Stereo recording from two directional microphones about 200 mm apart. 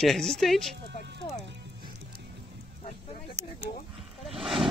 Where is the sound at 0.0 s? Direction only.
Centre (ahead or behind).